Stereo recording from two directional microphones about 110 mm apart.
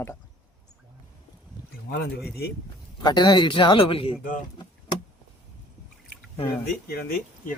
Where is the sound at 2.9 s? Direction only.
40° left (ahead or behind).